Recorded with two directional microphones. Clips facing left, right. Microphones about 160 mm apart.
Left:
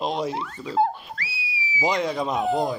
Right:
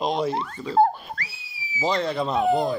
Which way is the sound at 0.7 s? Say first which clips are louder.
Right 3 dB; 45° right (ahead or behind).